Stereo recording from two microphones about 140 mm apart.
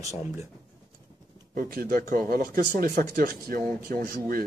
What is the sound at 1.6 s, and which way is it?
A man's voice, 80° right.